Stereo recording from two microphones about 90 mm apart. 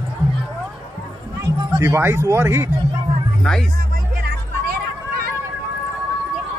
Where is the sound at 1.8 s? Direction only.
30° right (ahead or behind).